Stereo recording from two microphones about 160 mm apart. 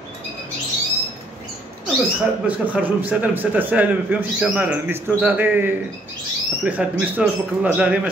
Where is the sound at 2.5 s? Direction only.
10° right (ahead or behind).